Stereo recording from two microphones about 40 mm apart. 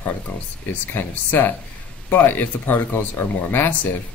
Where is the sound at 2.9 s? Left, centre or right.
Left.